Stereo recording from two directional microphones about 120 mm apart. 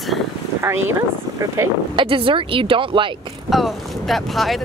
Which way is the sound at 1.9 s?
45° right (ahead or behind).